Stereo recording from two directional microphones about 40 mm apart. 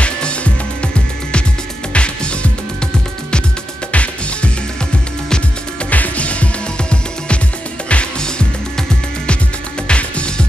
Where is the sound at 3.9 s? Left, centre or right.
Left.